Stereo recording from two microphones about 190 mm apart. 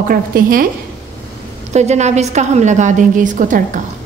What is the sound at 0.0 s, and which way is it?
Speech, 50° right (ahead or behind).